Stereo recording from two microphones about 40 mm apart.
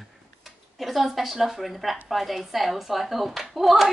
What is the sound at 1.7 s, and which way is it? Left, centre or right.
Speech, centre.